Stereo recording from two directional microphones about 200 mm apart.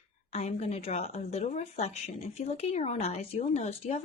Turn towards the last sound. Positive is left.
turn(degrees=35)  # may be behind; listen again after turning